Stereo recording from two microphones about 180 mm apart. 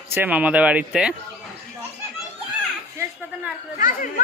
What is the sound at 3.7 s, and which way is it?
Speech, 45° left (ahead or behind).